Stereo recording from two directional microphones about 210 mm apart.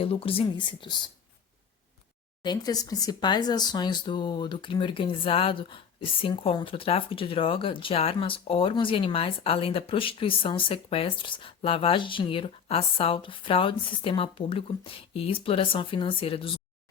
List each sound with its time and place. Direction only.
0.0 s speech: 25° left (ahead or behind)
2.4 s speech: 20° left (ahead or behind)